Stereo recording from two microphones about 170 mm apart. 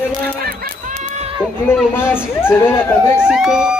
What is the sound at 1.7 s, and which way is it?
Speech, 15° left (ahead or behind).